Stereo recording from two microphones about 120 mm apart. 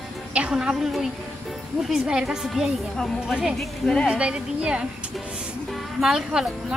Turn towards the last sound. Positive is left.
turn(degrees=-5)  # may be behind; listen again after turning